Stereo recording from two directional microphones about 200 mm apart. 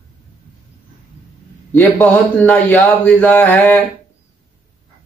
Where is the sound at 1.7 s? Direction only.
5° left (ahead or behind).